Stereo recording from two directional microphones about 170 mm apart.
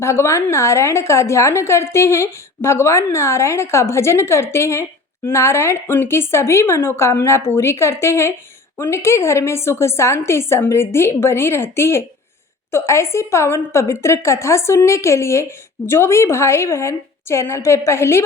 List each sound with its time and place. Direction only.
0.0 s a woman's voice: 15° left (ahead or behind)